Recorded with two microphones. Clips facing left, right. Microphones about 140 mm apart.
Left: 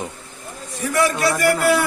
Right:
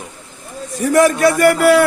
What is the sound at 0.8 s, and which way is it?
A man's voice, 45° right (ahead or behind).